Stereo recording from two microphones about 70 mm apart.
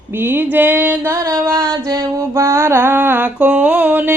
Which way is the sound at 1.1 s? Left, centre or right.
Right.